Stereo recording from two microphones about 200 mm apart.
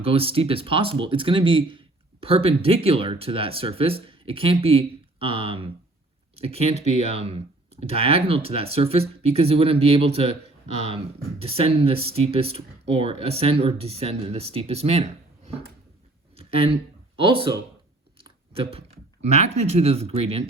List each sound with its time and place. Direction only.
0.0 s speech: 30° right (ahead or behind)
16.3 s a sound: 30° right (ahead or behind)
17.2 s speech: 25° right (ahead or behind)
18.2 s chewing: 25° right (ahead or behind)
19.2 s speech: 35° right (ahead or behind)